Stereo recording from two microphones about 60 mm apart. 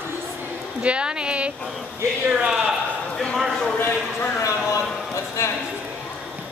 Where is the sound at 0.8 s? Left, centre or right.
Centre.